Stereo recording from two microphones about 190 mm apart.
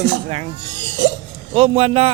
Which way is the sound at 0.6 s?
75° right (ahead or behind).